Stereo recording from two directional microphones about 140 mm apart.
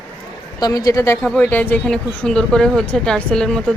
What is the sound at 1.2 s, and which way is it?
Speech, 10° left (ahead or behind).